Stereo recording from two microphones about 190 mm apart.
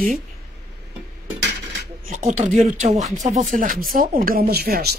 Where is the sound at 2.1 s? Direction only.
40° right (ahead or behind).